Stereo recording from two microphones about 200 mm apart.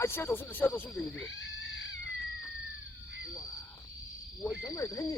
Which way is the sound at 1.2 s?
65° left (ahead or behind).